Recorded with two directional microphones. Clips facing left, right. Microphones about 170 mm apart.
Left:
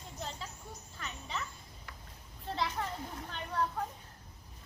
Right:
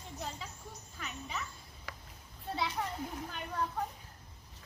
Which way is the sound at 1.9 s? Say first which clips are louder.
Right 5 dB; 90° right.